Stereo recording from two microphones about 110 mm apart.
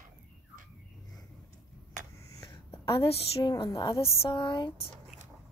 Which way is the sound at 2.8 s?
60° left (ahead or behind).